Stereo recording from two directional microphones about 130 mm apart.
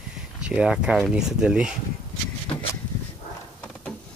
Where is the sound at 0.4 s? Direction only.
5° right (ahead or behind).